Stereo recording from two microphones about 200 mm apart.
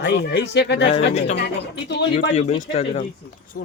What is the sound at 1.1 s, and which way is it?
Speech, 35° left (ahead or behind).